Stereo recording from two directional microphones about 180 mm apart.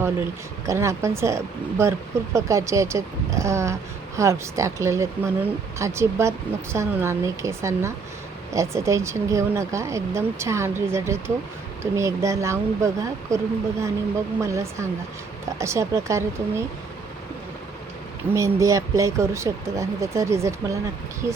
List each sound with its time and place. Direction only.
0.0 s speech: 15° right (ahead or behind)
18.3 s speech: 15° right (ahead or behind)
21.2 s speech: 20° left (ahead or behind)